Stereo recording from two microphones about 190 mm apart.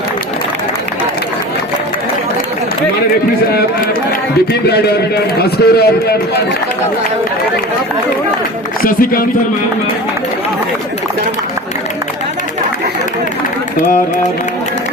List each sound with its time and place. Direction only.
4.7 s a man's voice: 60° left (ahead or behind)
8.8 s speech: 50° left (ahead or behind)